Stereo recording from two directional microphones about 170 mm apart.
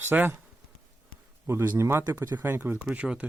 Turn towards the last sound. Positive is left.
turn(degrees=-10)  # may be behind; listen again after turning